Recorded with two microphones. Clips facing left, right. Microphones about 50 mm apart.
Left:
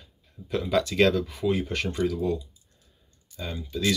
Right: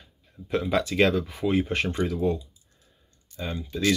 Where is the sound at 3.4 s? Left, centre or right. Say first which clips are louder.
Right 2 dB; right.